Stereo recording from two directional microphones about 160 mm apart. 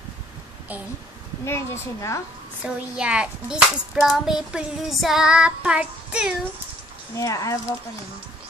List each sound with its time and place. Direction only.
1.4 s a woman's voice: 20° left (ahead or behind)
2.6 s a child's voice: 5° right (ahead or behind)
7.2 s speech: 20° left (ahead or behind)